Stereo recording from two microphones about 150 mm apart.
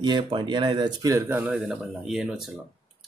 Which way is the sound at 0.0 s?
30° right (ahead or behind).